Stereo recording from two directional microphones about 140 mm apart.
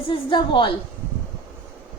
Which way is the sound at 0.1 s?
35° left (ahead or behind).